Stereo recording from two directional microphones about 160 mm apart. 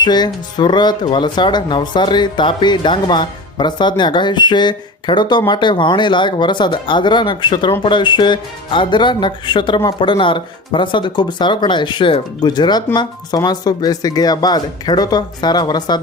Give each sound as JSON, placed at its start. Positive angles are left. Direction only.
{"t": 0.0, "sound": "speech", "side_deg": 25}